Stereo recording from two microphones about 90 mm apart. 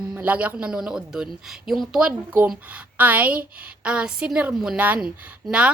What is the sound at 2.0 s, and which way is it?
A woman's voice, 15° right (ahead or behind).